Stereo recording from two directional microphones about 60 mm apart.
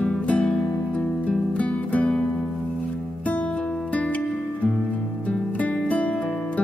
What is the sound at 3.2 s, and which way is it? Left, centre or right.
Music, left.